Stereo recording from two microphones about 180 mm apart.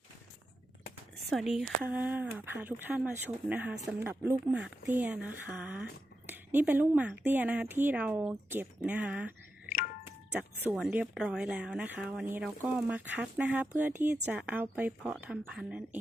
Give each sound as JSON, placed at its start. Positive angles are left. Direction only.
{"t": 1.3, "sound": "speech", "side_deg": 0}
{"t": 9.6, "sound": "music", "side_deg": 50}
{"t": 10.7, "sound": "speech", "side_deg": -5}